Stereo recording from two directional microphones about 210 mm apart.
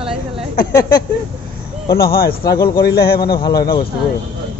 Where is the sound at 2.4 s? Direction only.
20° left (ahead or behind).